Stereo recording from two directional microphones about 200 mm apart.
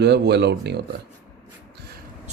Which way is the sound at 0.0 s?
55° right (ahead or behind).